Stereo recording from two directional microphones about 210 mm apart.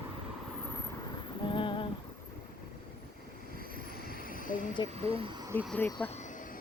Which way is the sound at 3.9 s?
45° left (ahead or behind).